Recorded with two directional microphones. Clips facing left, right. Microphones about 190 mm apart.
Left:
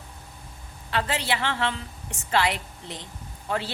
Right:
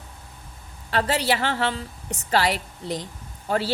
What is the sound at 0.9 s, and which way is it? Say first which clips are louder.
A woman's voice: right 4 dB; 40° right (ahead or behind).